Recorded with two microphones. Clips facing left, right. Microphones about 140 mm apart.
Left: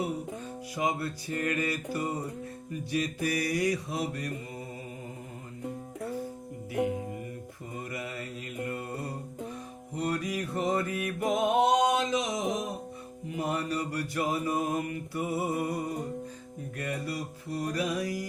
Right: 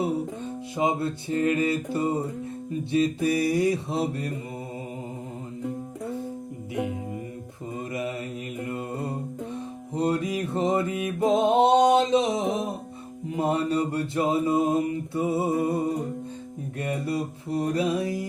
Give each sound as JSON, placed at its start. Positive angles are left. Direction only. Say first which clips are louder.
{"t": 0.0, "sound": "music", "louder": "right 6 dB", "side_deg": -25}
{"t": 2.9, "sound": "mantra", "louder": "right 7 dB", "side_deg": -25}
{"t": 7.8, "sound": "mantra", "louder": "right 7 dB", "side_deg": -20}
{"t": 9.9, "sound": "music", "louder": "right 6 dB", "side_deg": -25}
{"t": 13.3, "sound": "mantra", "louder": "right 7 dB", "side_deg": -25}